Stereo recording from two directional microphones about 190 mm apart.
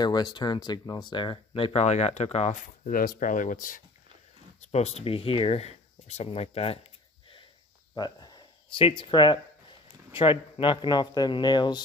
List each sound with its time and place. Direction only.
0.0 s speech: 20° left (ahead or behind); by 3.8 s 45° left (ahead or behind)
4.6 s speech: 35° left (ahead or behind)
7.9 s a sound: 20° left (ahead or behind)
10.1 s speech: 25° left (ahead or behind)